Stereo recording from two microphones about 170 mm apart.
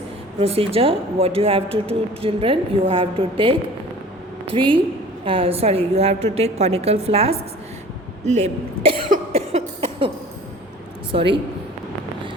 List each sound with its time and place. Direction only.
0.3 s a woman's voice: 35° right (ahead or behind)
9.0 s a sound: 45° right (ahead or behind)
11.1 s speech: 30° right (ahead or behind)